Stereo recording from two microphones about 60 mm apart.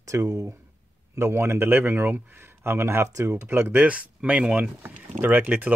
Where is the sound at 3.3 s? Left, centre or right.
Right.